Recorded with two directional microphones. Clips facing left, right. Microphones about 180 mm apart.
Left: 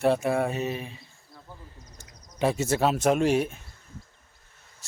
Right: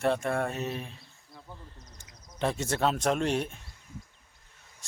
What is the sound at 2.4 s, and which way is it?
Speech, 5° left (ahead or behind).